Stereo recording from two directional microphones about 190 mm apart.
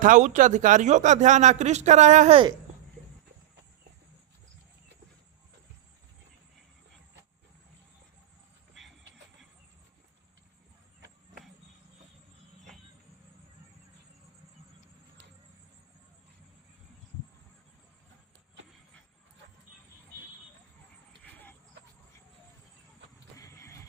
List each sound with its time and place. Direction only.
0.0 s speech: 45° right (ahead or behind)
23.4 s neigh: 15° left (ahead or behind)